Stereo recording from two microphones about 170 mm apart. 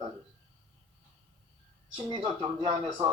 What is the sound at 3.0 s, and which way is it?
Speech, 25° right (ahead or behind).